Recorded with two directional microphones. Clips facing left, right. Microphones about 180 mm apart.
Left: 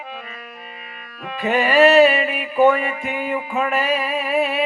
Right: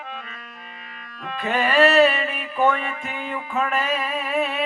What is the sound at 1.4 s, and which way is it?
Music, 5° left (ahead or behind).